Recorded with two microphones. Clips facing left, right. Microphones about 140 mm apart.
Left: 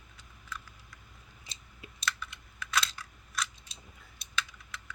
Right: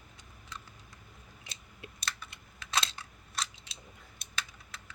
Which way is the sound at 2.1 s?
30° right (ahead or behind).